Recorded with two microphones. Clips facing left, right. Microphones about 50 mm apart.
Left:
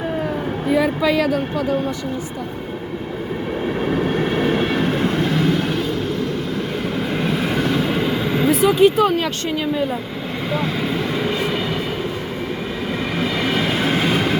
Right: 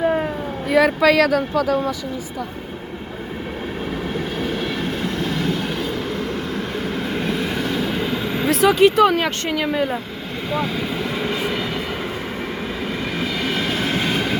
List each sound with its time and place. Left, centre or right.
0.7 s speech: right
4.5 s train: left
7.1 s vehicle: centre
8.4 s speech: right
13.4 s train: centre